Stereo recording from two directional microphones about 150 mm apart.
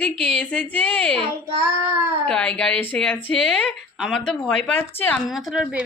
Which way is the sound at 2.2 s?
5° left (ahead or behind).